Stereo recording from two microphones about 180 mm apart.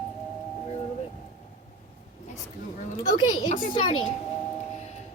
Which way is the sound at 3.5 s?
40° left (ahead or behind).